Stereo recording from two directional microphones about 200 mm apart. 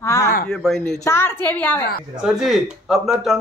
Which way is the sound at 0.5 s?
5° left (ahead or behind).